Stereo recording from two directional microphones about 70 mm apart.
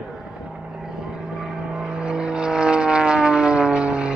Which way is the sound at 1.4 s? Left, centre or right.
Centre.